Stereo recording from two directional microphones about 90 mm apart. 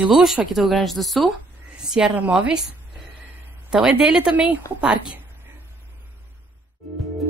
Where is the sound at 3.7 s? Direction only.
10° right (ahead or behind).